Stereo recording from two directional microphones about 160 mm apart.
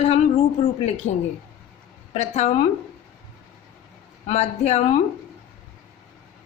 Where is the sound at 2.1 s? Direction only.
45° left (ahead or behind).